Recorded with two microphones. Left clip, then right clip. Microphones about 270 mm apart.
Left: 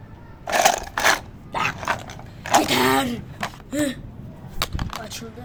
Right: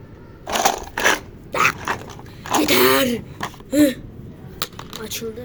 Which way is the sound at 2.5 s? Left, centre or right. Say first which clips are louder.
Right 2 dB; centre.